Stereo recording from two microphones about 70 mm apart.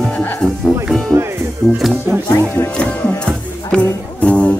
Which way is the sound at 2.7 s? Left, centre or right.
Centre.